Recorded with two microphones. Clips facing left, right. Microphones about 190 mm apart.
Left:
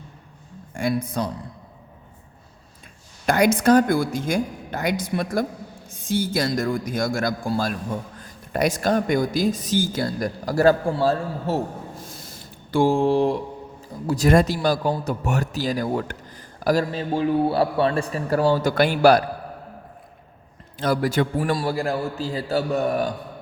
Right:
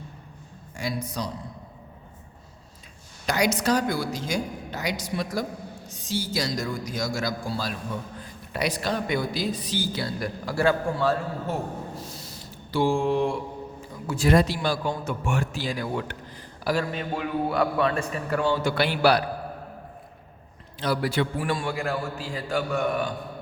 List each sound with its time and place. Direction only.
0.7 s speech: 55° left (ahead or behind)
3.2 s speech: 55° left (ahead or behind); by 11.6 s 30° left (ahead or behind)
11.9 s a sound: 50° left (ahead or behind); by 13.4 s 35° left (ahead or behind)
14.1 s a man's voice: 45° left (ahead or behind)
20.7 s a man's voice: 45° left (ahead or behind)